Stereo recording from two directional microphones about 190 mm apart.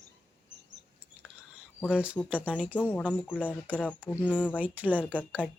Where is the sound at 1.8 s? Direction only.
5° right (ahead or behind).